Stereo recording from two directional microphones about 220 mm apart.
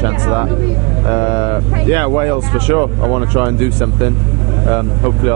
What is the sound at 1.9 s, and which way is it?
Speech, 20° right (ahead or behind).